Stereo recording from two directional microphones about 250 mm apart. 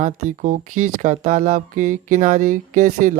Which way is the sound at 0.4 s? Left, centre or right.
Right.